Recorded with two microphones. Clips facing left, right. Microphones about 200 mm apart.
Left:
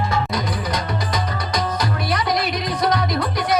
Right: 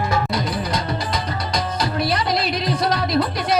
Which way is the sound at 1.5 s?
30° right (ahead or behind).